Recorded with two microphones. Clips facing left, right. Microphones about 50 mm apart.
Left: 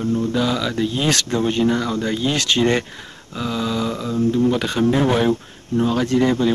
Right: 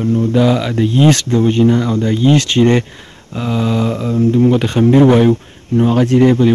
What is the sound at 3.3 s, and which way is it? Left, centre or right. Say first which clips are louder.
Mantra: right 6 dB; right.